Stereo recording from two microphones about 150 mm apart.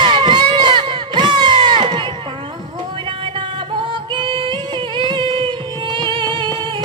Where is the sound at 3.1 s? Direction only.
35° right (ahead or behind).